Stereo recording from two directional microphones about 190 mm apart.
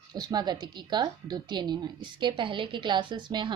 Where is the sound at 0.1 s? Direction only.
20° right (ahead or behind).